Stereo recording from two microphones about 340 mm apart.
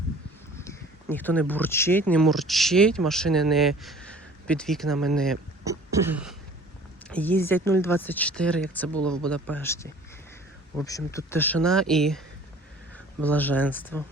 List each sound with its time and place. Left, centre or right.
0.5 s speech: centre
5.6 s throat clearing: centre
7.1 s speech: centre
13.2 s speech: centre